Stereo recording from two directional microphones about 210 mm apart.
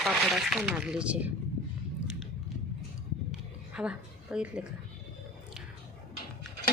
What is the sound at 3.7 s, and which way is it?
Speech, 5° right (ahead or behind).